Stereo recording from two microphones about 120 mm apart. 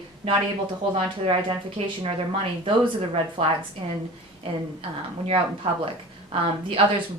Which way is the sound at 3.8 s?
45° right (ahead or behind).